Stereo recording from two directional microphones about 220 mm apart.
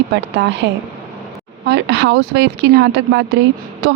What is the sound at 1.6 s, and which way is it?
Speech, 50° right (ahead or behind).